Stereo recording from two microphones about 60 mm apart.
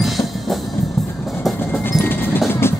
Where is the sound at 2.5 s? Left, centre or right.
Left.